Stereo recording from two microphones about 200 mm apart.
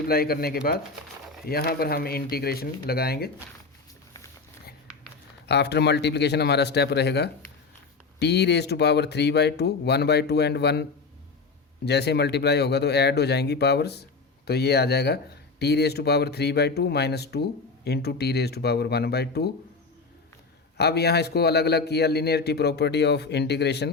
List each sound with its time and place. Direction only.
0.1 s speech: 50° left (ahead or behind)
5.5 s speech: 55° left (ahead or behind)
11.9 s speech: 55° left (ahead or behind)
20.7 s speech: 55° left (ahead or behind)